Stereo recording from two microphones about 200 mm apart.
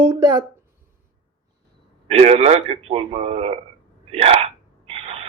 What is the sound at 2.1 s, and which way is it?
Speech, 30° right (ahead or behind).